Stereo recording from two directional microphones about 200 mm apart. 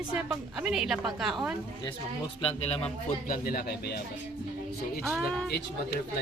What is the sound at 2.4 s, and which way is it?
Speech, 30° left (ahead or behind).